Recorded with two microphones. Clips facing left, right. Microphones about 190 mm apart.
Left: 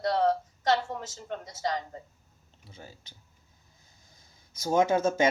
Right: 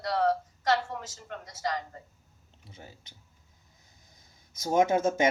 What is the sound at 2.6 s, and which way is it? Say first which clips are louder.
Speech: left 1 dB; 20° right (ahead or behind).